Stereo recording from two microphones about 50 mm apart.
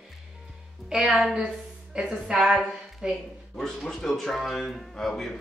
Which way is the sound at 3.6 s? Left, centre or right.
Centre.